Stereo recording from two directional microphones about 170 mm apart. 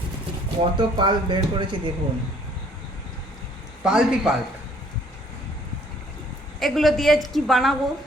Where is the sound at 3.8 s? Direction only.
5° right (ahead or behind).